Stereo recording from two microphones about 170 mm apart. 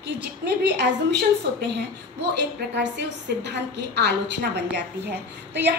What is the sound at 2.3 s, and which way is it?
A woman's voice, 90° right.